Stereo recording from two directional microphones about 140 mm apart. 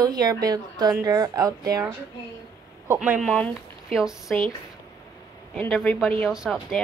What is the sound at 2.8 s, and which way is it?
Speech, 15° right (ahead or behind).